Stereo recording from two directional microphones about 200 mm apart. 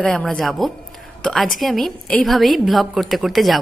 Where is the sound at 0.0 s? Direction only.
5° left (ahead or behind).